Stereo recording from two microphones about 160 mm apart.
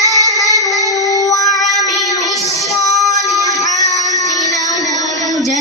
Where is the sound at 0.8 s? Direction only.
20° left (ahead or behind).